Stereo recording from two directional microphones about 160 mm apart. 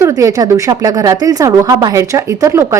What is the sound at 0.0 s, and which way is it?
Speech, 20° right (ahead or behind).